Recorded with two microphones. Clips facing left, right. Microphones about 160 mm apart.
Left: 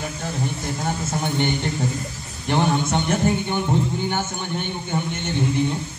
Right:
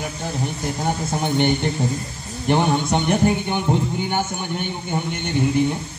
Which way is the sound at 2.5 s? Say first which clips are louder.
Right 2 dB; 15° right (ahead or behind).